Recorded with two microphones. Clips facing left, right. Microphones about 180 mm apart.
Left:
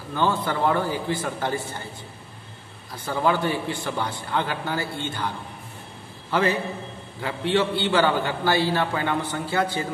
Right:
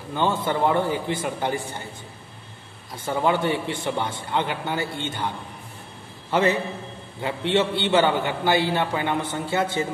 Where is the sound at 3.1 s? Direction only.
20° right (ahead or behind).